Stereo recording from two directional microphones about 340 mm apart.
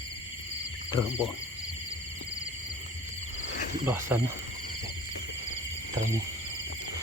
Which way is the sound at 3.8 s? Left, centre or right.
Centre.